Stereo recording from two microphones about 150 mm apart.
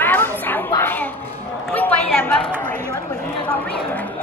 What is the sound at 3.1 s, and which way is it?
Chatter, 10° left (ahead or behind).